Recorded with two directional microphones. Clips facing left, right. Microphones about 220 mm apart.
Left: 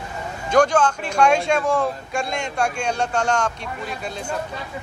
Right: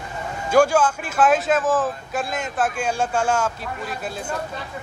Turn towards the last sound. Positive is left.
turn(degrees=-5)  # may be behind; listen again after turning